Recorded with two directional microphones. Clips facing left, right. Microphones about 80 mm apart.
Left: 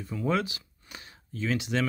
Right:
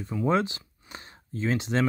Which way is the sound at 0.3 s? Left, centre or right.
Right.